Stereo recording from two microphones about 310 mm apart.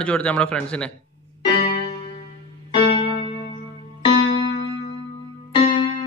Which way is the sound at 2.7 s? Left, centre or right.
Centre.